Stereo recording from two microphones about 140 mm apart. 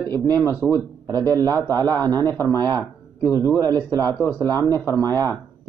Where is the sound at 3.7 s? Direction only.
15° left (ahead or behind).